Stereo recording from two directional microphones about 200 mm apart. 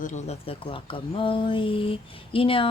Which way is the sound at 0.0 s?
35° left (ahead or behind).